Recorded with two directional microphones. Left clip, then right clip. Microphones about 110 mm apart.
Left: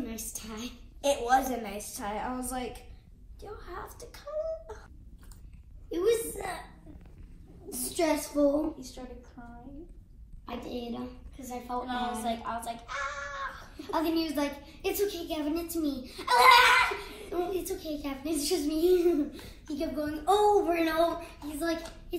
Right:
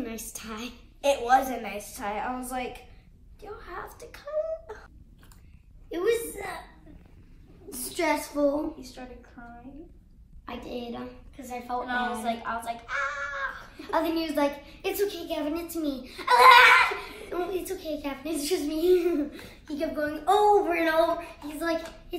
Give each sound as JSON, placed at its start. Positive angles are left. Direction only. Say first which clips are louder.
{"t": 0.0, "sound": "a woman's voice", "louder": "right 3 dB", "side_deg": -30}
{"t": 1.0, "sound": "a child's voice", "louder": "right 3 dB", "side_deg": 0}
{"t": 5.9, "sound": "a woman's voice", "louder": "right 1 dB", "side_deg": -15}
{"t": 7.7, "sound": "a woman's voice", "louder": "right 2 dB", "side_deg": -20}
{"t": 8.6, "sound": "speech", "louder": "even", "side_deg": 0}
{"t": 9.4, "sound": "a woman's voice", "louder": "right 6 dB", "side_deg": 10}
{"t": 10.4, "sound": "a woman's voice", "louder": "right 2 dB", "side_deg": -15}
{"t": 11.8, "sound": "speech", "louder": "right 4 dB", "side_deg": 0}
{"t": 13.7, "sound": "a woman's voice", "louder": "right 2 dB", "side_deg": -15}